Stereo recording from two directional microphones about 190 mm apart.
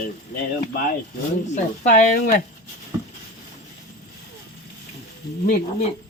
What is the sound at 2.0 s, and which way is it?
Speech, 45° left (ahead or behind).